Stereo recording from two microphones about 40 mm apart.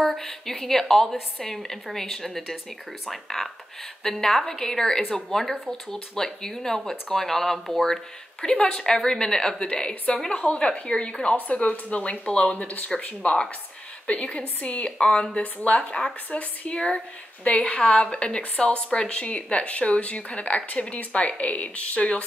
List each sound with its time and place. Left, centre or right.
0.0 s speech: centre
7.9 s a woman's voice: centre
11.3 s a woman's voice: left
14.9 s a woman's voice: left
15.4 s speech: left
15.8 s a woman's voice: centre